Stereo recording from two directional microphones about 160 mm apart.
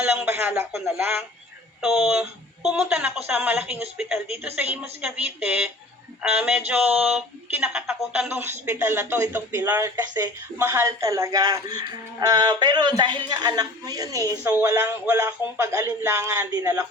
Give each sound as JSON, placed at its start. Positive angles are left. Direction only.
{"t": 0.0, "sound": "speech", "side_deg": -10}